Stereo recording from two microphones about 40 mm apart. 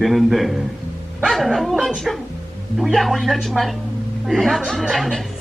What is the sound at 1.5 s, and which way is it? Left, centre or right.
Speech, centre.